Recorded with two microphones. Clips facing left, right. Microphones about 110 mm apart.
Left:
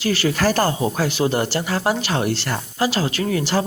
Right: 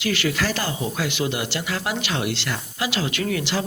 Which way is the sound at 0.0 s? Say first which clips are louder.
Left 4 dB; 35° left (ahead or behind).